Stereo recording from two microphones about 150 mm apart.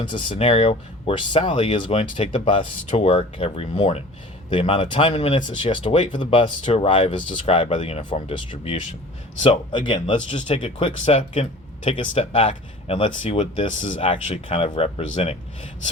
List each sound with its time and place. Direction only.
0.0 s speech: 35° left (ahead or behind)
9.8 s speech: 30° left (ahead or behind)